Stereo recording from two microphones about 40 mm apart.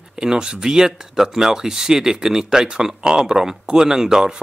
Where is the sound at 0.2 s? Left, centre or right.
Centre.